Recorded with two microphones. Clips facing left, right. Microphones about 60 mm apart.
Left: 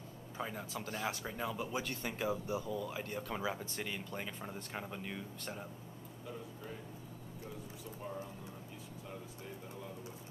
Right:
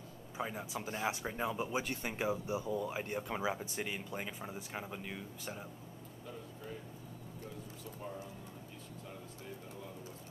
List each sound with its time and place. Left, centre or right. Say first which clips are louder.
0.4 s speech: right 2 dB; centre